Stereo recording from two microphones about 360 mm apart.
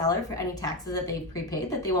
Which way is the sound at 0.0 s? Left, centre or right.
Centre.